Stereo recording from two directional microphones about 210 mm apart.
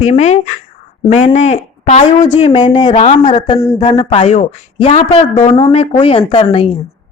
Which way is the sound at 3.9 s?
25° left (ahead or behind).